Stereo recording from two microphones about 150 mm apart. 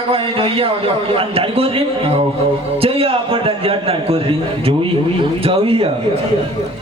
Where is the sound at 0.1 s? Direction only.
40° right (ahead or behind).